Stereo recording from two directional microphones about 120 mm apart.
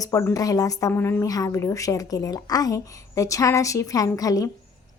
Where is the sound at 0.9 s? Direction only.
20° left (ahead or behind).